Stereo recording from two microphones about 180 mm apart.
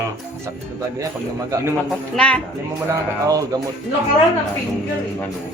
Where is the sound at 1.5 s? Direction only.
20° right (ahead or behind).